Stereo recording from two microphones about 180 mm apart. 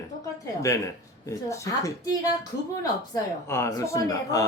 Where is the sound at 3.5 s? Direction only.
15° left (ahead or behind).